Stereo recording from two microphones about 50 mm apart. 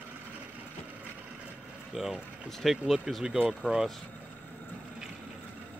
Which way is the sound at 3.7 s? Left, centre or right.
Right.